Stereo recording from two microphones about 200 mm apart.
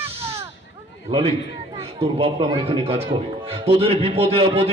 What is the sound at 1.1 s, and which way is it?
A man's voice, 30° right (ahead or behind).